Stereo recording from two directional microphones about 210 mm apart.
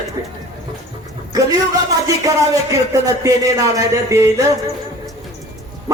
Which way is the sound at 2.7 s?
15° right (ahead or behind).